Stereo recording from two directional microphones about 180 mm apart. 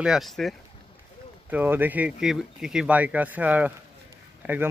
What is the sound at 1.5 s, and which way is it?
Speech, 10° right (ahead or behind).